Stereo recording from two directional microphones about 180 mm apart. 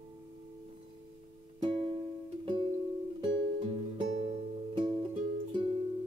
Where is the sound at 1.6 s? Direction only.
30° right (ahead or behind).